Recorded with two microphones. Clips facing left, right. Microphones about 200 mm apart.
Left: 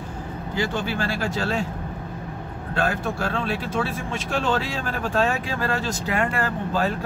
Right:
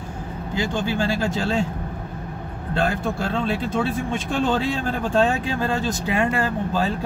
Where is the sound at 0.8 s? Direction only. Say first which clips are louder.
Right 3 dB; 20° right (ahead or behind).